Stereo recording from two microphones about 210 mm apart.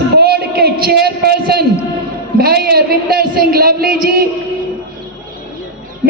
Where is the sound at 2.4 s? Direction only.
45° right (ahead or behind).